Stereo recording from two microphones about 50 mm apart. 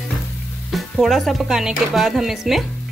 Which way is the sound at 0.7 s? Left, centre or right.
Centre.